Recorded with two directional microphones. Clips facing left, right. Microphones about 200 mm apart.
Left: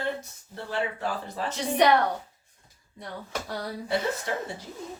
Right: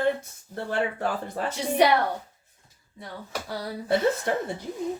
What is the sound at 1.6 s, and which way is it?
Speech, 10° right (ahead or behind).